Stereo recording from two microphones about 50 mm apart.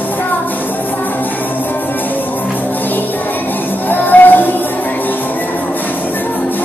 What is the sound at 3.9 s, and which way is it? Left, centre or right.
Music, left.